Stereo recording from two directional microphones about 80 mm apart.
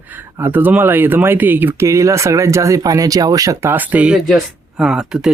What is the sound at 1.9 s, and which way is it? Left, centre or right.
Speech, right.